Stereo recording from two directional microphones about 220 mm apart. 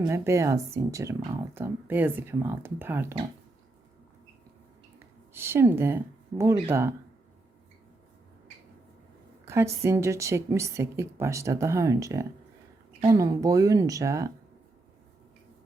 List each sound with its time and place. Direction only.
0.0 s speech: 15° right (ahead or behind)
5.3 s speech: 10° right (ahead or behind)
9.5 s a sound: 10° right (ahead or behind)
9.8 s speech: 15° right (ahead or behind)